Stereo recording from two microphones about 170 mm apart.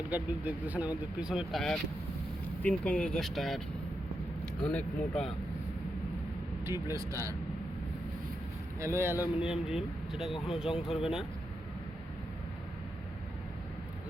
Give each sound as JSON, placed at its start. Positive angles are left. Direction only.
{"t": 0.1, "sound": "speech", "side_deg": -10}
{"t": 4.6, "sound": "speech", "side_deg": 5}
{"t": 6.7, "sound": "speech", "side_deg": -15}
{"t": 8.8, "sound": "speech", "side_deg": -15}